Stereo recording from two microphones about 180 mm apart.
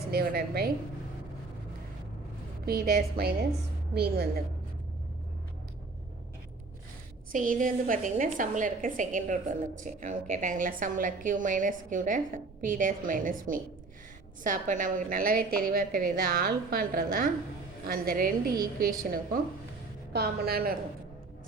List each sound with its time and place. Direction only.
0.1 s a woman's voice: 60° right (ahead or behind)
2.6 s a woman's voice: 55° right (ahead or behind)
7.3 s a woman's voice: 50° right (ahead or behind)